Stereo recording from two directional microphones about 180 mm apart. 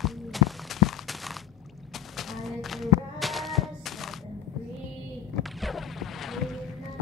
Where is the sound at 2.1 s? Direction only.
Centre (ahead or behind).